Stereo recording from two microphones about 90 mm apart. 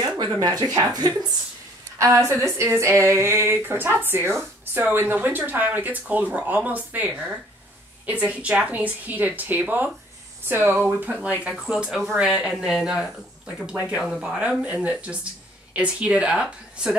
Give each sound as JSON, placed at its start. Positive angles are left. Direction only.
{"t": 0.0, "sound": "speech", "side_deg": -50}
{"t": 11.9, "sound": "speech", "side_deg": 0}